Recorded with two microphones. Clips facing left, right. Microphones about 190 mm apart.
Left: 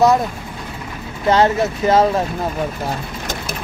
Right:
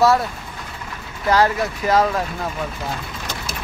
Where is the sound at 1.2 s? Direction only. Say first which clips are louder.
Left 3 dB; 25° left (ahead or behind).